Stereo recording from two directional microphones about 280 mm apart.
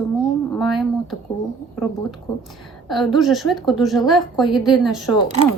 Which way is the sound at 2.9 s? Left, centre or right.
Centre.